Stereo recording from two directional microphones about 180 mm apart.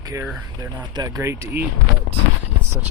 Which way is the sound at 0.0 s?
15° right (ahead or behind).